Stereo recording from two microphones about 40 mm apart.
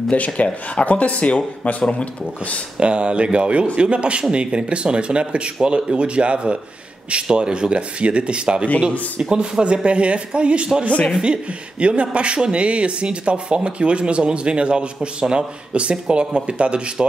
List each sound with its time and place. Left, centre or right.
0.1 s speech: left
2.8 s speech: right
11.8 s speech: right